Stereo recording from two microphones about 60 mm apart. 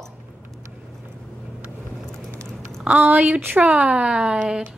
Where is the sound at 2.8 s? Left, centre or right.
Right.